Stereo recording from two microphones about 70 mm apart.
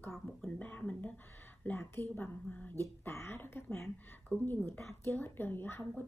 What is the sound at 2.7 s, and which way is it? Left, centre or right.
Speech, left.